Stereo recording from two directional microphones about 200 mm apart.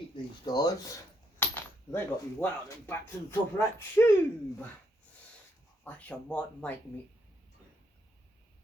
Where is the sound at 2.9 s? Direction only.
10° left (ahead or behind).